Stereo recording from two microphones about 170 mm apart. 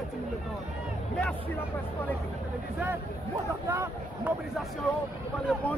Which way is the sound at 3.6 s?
15° right (ahead or behind).